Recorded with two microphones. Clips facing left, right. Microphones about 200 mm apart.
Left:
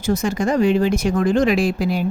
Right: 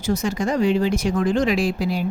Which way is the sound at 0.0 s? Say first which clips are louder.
Left 3 dB; 50° left (ahead or behind).